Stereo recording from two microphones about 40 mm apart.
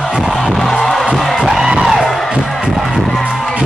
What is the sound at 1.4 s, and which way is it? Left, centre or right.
Music, centre.